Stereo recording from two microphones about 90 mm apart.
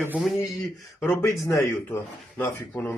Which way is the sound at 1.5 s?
30° left (ahead or behind).